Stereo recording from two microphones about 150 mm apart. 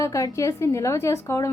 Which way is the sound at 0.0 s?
20° left (ahead or behind).